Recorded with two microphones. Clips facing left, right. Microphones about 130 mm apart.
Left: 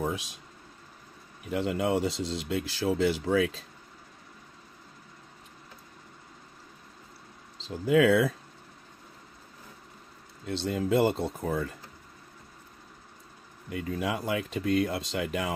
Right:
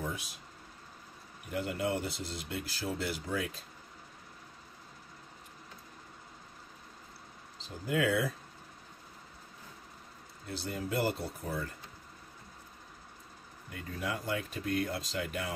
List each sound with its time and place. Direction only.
0.0 s a sound: 90° left
1.5 s speech: 90° left
7.6 s speech: 90° left
10.4 s speech: 90° left
13.7 s speech: 90° left